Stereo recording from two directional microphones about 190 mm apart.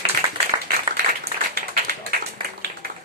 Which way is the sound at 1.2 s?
55° right (ahead or behind).